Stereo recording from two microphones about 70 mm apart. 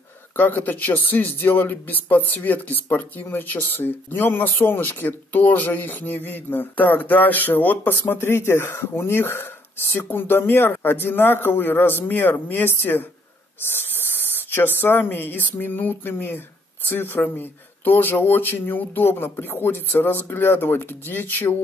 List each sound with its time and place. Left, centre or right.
0.4 s speech: left